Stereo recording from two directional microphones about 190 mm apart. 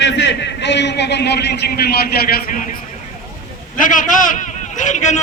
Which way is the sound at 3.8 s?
45° left (ahead or behind).